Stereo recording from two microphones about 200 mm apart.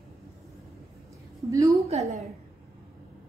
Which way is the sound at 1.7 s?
30° right (ahead or behind).